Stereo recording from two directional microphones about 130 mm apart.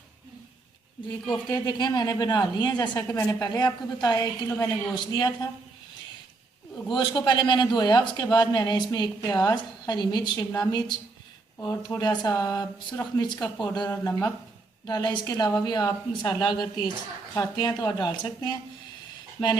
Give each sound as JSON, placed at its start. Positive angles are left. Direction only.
{"t": 1.3, "sound": "a man's voice", "side_deg": 35}
{"t": 6.9, "sound": "a man's voice", "side_deg": 35}